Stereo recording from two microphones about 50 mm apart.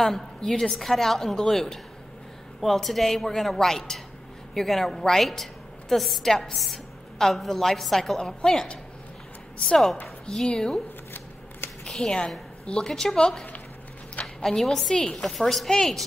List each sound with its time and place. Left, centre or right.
0.0 s a woman's voice: centre
10.2 s a woman's voice: centre
11.8 s a woman's voice: centre
15.3 s a woman's voice: centre
15.7 s a woman's voice: centre